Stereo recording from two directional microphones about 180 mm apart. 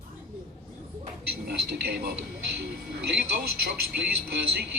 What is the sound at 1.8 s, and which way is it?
Speech, 60° right (ahead or behind).